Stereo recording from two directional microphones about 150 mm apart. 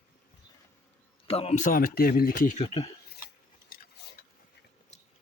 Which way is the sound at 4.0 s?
90° left.